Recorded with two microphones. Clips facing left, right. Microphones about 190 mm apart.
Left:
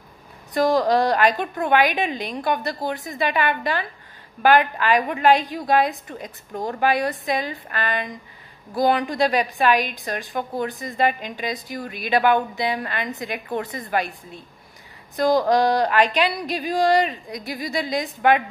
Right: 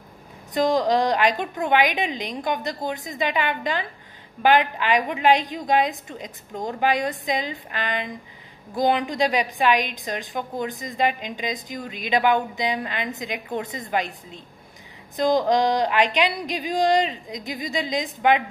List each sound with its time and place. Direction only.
0.5 s a woman's voice: 20° right (ahead or behind)